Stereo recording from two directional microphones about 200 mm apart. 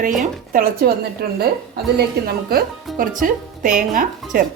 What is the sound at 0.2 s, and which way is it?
Speech, 45° right (ahead or behind).